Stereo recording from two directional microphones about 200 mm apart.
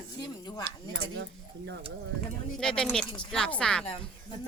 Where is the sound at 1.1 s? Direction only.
60° right (ahead or behind).